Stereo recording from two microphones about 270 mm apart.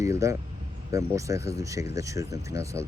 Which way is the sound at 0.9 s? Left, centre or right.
Centre.